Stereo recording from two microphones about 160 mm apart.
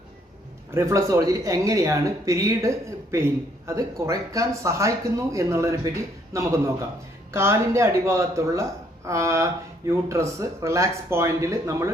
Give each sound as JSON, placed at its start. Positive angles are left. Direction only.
{"t": 0.7, "sound": "speech", "side_deg": -20}